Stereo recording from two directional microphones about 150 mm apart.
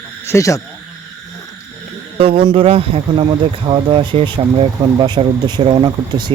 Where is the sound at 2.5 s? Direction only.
40° right (ahead or behind).